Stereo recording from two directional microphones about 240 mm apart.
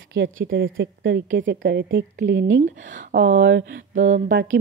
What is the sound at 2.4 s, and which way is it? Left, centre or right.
Speech, right.